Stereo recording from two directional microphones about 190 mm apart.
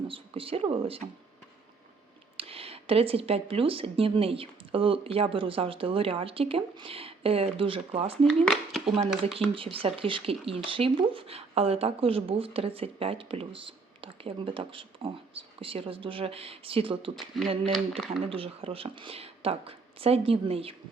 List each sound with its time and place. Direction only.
0.1 s speech: 30° right (ahead or behind)
2.4 s speech: 30° right (ahead or behind)
8.3 s speech: centre (ahead or behind)
9.0 s speech: 30° right (ahead or behind)
17.2 s speech: centre (ahead or behind)
18.3 s speech: 30° right (ahead or behind)